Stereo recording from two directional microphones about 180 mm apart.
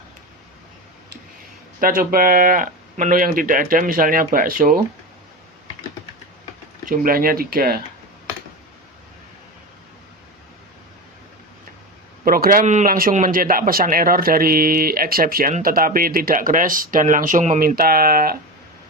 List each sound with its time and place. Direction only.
1.8 s a man's voice: 55° right (ahead or behind)
6.8 s speech: 55° right (ahead or behind)
12.2 s a man's voice: 50° right (ahead or behind)